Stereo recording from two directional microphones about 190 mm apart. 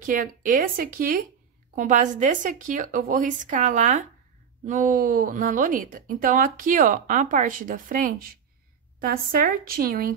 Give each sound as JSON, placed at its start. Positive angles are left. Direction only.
{"t": 0.0, "sound": "a woman's voice", "side_deg": -45}